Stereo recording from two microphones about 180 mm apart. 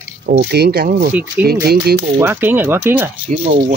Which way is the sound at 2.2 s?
10° right (ahead or behind).